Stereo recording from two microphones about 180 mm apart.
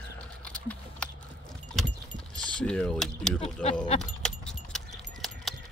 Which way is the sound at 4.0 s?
5° left (ahead or behind).